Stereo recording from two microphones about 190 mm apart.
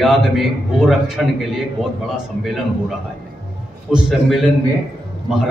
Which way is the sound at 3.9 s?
Centre (ahead or behind).